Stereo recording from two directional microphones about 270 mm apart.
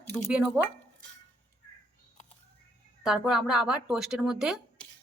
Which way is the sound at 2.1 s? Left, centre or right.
Left.